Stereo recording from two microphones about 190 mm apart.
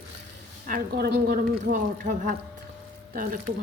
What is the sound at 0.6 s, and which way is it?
A woman's voice, 50° right (ahead or behind).